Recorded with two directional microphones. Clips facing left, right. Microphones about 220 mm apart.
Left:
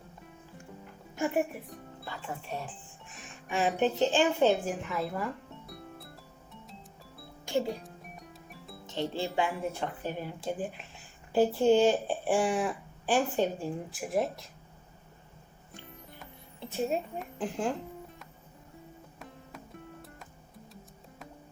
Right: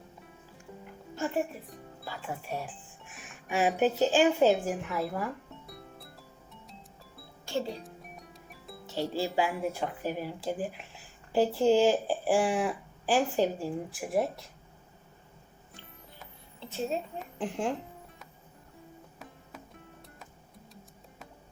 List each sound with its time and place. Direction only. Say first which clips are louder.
1.1 s speech: left 2 dB; 15° left (ahead or behind)
2.0 s speech: right 2 dB; 5° right (ahead or behind)
3.1 s music: right 1 dB; 5° right (ahead or behind)
7.4 s music: left 3 dB; 15° left (ahead or behind)
7.9 s speech: even; centre (ahead or behind)
16.6 s a woman's voice: left 2 dB; 15° left (ahead or behind)
17.2 s speech: even; centre (ahead or behind)
19.2 s music: left 2 dB; centre (ahead or behind)